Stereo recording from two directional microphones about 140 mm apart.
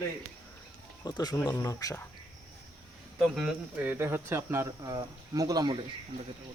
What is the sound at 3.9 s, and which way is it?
Speech, 15° right (ahead or behind).